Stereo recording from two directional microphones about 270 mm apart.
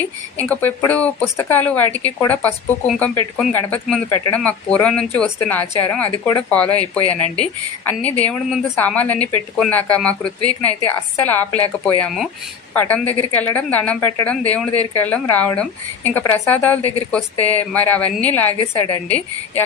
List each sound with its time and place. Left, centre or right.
0.3 s a woman's voice: centre
18.6 s a woman's voice: left